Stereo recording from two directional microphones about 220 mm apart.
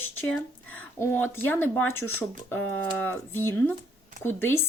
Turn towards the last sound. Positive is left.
turn(degrees=10)  # may be behind; listen again after turning